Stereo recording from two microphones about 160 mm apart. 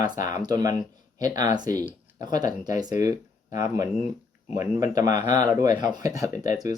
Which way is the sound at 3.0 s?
20° right (ahead or behind).